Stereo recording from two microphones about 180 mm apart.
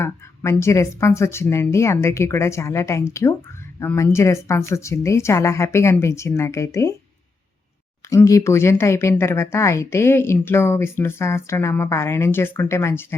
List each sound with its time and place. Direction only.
0.0 s speech: 15° left (ahead or behind)
8.1 s speech: 15° left (ahead or behind)